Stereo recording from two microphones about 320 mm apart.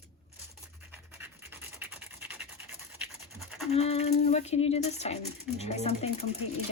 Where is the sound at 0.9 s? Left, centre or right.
Centre.